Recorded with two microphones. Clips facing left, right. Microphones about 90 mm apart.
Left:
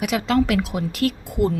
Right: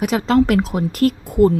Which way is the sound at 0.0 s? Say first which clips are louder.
Right 4 dB; 35° right (ahead or behind).